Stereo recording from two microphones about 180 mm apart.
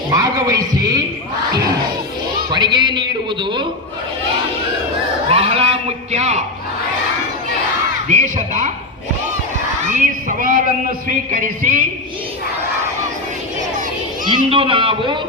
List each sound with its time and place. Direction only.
0.1 s heart sounds: 20° right (ahead or behind)
2.5 s a man's voice: 25° right (ahead or behind)
5.3 s speech: 35° right (ahead or behind)
8.0 s speech: 45° right (ahead or behind)
9.9 s a sound: 45° right (ahead or behind)
14.3 s a man's voice: 30° right (ahead or behind)